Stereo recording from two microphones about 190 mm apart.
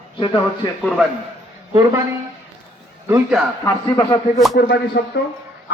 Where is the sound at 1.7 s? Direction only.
15° right (ahead or behind).